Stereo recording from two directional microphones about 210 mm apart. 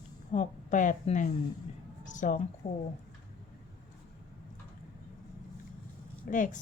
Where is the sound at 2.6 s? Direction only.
35° left (ahead or behind).